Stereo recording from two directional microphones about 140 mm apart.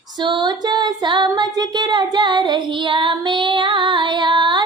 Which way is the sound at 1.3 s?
30° right (ahead or behind).